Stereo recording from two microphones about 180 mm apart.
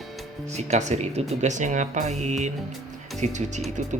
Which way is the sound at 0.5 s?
40° right (ahead or behind).